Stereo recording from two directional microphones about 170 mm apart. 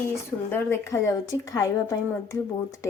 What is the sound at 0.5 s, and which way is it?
A woman's voice, 15° left (ahead or behind).